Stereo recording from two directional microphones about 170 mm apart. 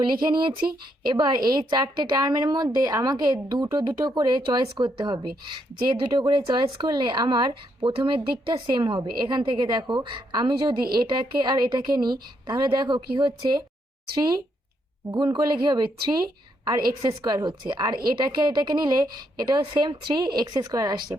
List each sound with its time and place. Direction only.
0.0 s a woman's voice: 25° right (ahead or behind)